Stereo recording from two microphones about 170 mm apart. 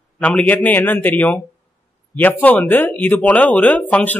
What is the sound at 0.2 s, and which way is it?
Speech, 10° left (ahead or behind).